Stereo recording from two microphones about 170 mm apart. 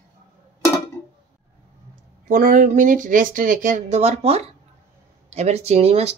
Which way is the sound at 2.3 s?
55° right (ahead or behind).